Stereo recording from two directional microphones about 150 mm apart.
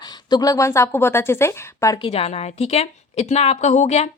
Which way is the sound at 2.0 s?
40° left (ahead or behind).